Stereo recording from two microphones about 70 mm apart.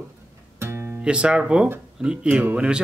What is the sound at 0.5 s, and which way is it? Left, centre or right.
Music, right.